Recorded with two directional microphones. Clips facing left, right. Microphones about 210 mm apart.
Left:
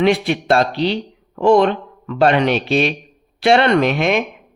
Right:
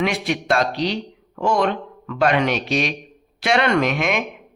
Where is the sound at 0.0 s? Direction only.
30° left (ahead or behind).